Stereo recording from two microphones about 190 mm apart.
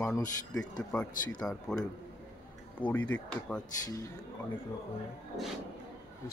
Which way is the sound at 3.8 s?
15° left (ahead or behind).